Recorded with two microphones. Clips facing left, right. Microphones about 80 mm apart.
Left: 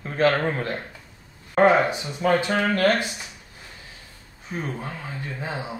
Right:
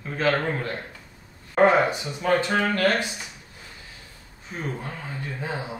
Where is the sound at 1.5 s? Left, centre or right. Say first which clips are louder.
Left 1 dB; centre.